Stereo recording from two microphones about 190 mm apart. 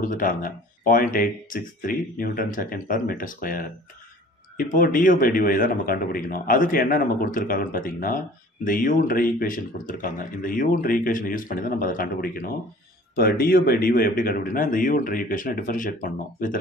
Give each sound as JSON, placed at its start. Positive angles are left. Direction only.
{"t": 0.0, "sound": "speech", "side_deg": 45}